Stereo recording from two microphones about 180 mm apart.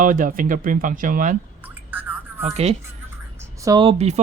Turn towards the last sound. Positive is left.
turn(degrees=-20)  # may be behind; listen again after turning